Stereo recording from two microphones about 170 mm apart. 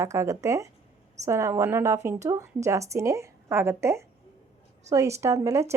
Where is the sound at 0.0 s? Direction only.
20° right (ahead or behind).